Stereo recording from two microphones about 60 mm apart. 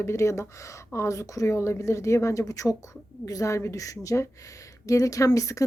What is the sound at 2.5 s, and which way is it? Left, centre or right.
A woman's voice, left.